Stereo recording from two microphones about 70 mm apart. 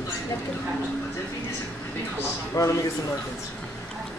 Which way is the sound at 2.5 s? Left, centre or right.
Left.